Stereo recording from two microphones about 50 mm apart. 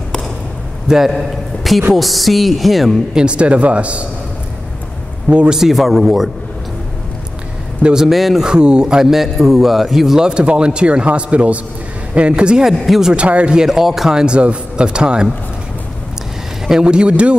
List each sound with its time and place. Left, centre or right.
0.8 s a man's voice: centre
3.2 s speech: right
5.3 s speech: right
5.6 s a woman's voice: centre
7.8 s a man's voice: centre
8.5 s a man's voice: centre
12.6 s a woman's voice: centre
13.1 s speech: right
13.6 s a man's voice: centre
14.2 s speech: right
16.6 s speech: centre